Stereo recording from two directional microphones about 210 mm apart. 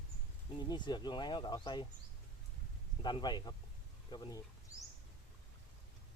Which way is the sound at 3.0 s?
20° left (ahead or behind).